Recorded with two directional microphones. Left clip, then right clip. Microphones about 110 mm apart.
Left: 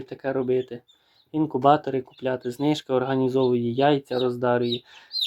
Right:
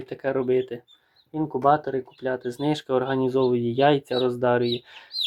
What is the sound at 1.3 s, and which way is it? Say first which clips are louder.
Speech: left 1 dB; 35° left (ahead or behind).